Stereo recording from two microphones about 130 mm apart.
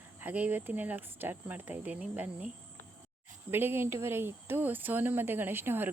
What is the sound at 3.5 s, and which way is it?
A woman's voice, 15° right (ahead or behind).